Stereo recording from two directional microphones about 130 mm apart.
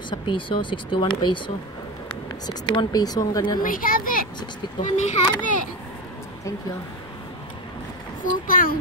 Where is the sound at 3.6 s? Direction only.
90° left.